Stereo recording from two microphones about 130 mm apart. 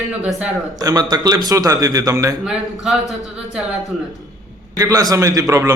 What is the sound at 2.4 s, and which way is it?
A man's voice, 5° right (ahead or behind).